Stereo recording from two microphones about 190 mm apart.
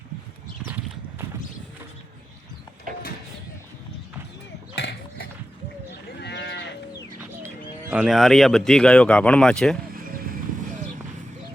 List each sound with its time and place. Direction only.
2.9 s mechanisms: 45° right (ahead or behind)
4.7 s horse: 65° left (ahead or behind)
6.1 s livestock: 60° left (ahead or behind)
7.4 s speech: 10° right (ahead or behind)
9.9 s vehicle: 50° right (ahead or behind)